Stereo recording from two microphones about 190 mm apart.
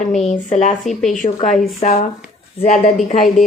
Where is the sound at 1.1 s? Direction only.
40° left (ahead or behind).